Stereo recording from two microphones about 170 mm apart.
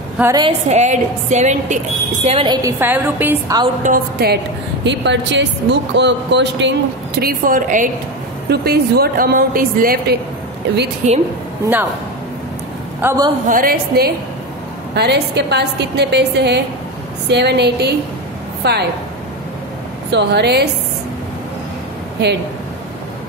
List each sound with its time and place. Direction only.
0.2 s a woman's voice: 20° right (ahead or behind)
0.5 s a woman's voice: 40° right (ahead or behind)
2.2 s a woman's voice: 30° right (ahead or behind)
2.8 s a woman's voice: 10° right (ahead or behind)
3.8 s a woman's voice: 60° right (ahead or behind)
4.8 s a woman's voice: 90° right
7.2 s a woman's voice: 55° right (ahead or behind)
8.5 s a woman's voice: 70° right (ahead or behind)
11.0 s a woman's voice: 45° right (ahead or behind)
11.6 s a woman's voice: 10° right (ahead or behind)
13.5 s a woman's voice: 60° right (ahead or behind)
15.0 s a woman's voice: 80° right
20.1 s a woman's voice: 85° right